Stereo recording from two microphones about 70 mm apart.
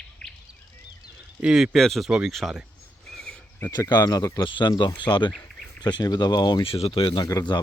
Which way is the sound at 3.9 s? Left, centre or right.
Left.